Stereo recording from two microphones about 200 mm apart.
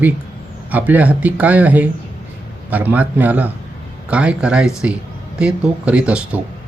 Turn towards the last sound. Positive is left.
turn(degrees=-5)  # may be behind; listen again after turning